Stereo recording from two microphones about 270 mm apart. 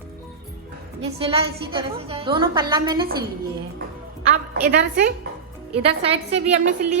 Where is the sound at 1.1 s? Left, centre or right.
Right.